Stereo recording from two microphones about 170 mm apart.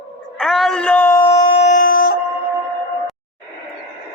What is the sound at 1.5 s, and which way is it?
Howl, 45° left (ahead or behind).